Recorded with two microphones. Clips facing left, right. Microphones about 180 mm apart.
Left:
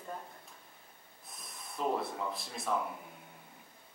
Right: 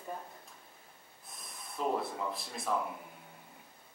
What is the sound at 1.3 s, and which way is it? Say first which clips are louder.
Speech: even; centre (ahead or behind).